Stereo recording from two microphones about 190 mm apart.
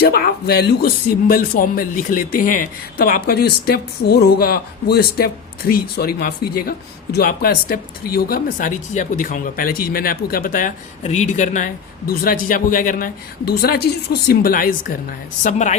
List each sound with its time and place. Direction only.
0.0 s a woman's voice: 55° left (ahead or behind); by 15.7 s 40° left (ahead or behind)